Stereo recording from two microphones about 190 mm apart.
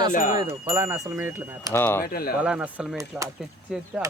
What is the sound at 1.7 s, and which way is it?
Speech, 10° left (ahead or behind).